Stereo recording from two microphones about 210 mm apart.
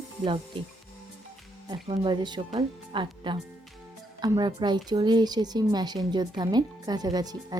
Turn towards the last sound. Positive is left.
turn(degrees=-20)  # may be behind; listen again after turning